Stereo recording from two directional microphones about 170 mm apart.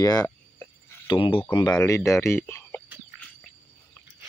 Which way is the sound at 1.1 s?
30° left (ahead or behind).